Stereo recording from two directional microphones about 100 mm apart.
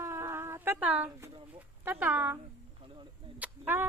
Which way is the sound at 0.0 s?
25° right (ahead or behind).